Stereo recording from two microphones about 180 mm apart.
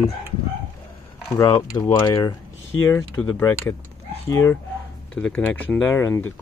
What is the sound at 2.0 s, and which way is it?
Speech, 25° left (ahead or behind).